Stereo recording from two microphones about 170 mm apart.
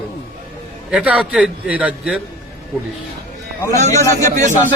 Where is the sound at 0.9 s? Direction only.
5° right (ahead or behind).